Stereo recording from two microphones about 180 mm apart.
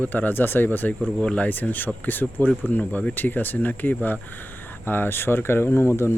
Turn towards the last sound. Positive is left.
turn(degrees=15)  # may be behind; listen again after turning